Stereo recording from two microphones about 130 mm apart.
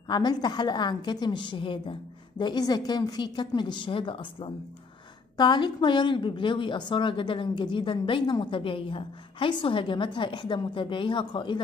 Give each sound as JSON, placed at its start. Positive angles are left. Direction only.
{"t": 0.1, "sound": "speech", "side_deg": 35}